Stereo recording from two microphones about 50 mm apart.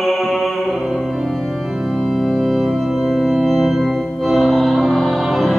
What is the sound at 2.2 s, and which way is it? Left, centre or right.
Organ, centre.